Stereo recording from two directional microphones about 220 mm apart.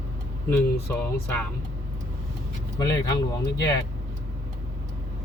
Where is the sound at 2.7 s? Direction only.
15° left (ahead or behind).